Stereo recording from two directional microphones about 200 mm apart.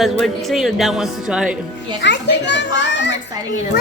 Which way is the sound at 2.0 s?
60° left (ahead or behind).